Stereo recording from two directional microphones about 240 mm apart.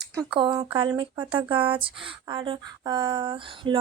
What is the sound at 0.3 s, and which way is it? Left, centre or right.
Speech, centre.